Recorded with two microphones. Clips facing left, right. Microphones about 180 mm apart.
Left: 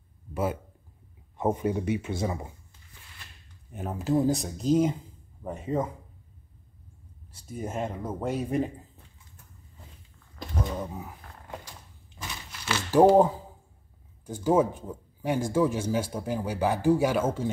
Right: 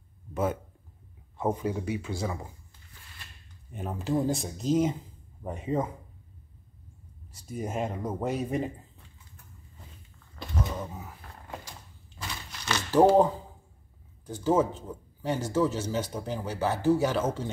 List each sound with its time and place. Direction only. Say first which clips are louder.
0.3 s a sound: even; 10° left (ahead or behind)
1.4 s speech: left 2 dB; 25° left (ahead or behind)
3.7 s speech: left 3 dB; 5° left (ahead or behind)
7.5 s speech: right 1 dB; 10° right (ahead or behind)
12.6 s a sound: left 2 dB; 10° left (ahead or behind)
14.2 s speech: left 2 dB; 10° left (ahead or behind)